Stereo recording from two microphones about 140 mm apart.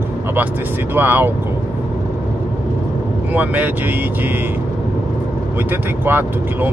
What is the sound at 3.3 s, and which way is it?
Speech, 10° right (ahead or behind).